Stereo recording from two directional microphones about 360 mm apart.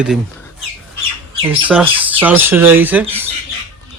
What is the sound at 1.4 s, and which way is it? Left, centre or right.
Speech, centre.